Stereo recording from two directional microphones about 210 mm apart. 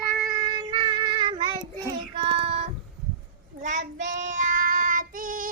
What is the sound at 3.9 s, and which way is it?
Child singing, 60° right (ahead or behind).